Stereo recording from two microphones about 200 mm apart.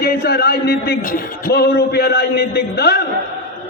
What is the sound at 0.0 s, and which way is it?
A man's voice, 50° left (ahead or behind).